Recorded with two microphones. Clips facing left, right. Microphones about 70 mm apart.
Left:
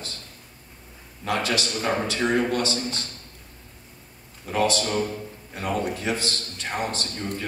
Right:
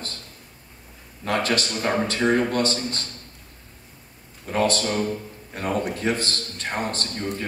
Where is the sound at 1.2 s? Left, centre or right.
Right.